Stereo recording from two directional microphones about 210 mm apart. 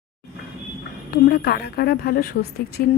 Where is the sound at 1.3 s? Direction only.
50° left (ahead or behind).